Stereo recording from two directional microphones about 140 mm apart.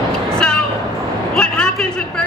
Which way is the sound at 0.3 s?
5° left (ahead or behind).